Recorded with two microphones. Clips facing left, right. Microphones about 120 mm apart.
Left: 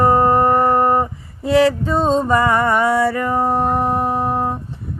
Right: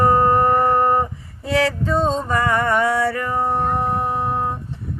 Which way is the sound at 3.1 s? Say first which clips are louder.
Left 3 dB; 30° left (ahead or behind).